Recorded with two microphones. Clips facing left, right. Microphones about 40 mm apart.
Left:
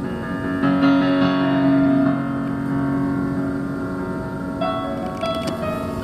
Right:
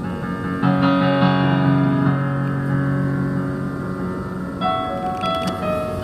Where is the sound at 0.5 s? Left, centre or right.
Centre.